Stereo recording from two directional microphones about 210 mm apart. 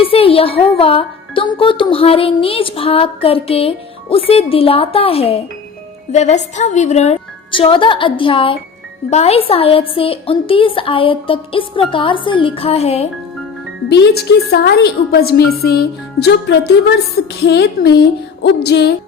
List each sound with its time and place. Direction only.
0.0 s speech: 25° left (ahead or behind)
13.9 s a woman's voice: 50° left (ahead or behind)